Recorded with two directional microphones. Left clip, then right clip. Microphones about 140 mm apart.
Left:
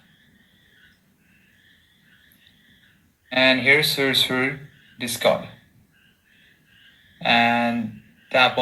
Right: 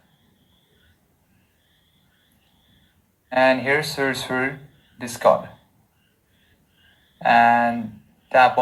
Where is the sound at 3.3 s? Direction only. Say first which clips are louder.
Left 1 dB; 20° left (ahead or behind).